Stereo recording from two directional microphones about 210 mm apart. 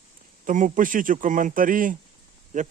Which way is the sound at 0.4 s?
40° right (ahead or behind).